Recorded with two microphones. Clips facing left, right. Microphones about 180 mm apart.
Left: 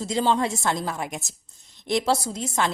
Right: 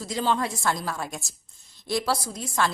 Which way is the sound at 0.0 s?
25° left (ahead or behind).